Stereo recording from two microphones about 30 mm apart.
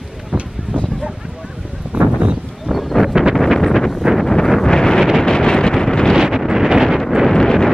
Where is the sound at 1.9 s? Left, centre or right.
Right.